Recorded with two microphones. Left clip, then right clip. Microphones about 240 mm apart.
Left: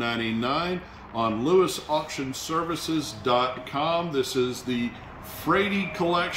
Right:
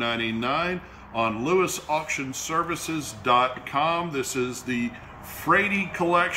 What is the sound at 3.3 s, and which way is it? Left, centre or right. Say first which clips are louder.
Speech: right 3 dB; centre.